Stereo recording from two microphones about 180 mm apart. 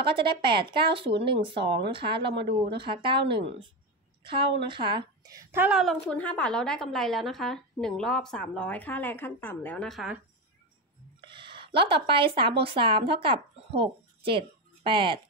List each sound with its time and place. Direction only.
0.0 s speech: 30° right (ahead or behind); by 5.8 s 10° right (ahead or behind)
5.8 s a woman's voice: 5° left (ahead or behind)
11.1 s speech: 25° right (ahead or behind)